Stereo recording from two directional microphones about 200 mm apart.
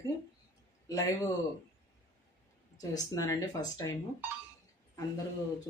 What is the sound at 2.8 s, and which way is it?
Speech, 20° left (ahead or behind).